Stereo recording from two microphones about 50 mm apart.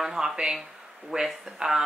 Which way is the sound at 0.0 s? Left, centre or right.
Centre.